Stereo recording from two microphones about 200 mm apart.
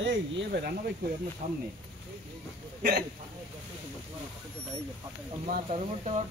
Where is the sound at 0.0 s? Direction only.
55° right (ahead or behind).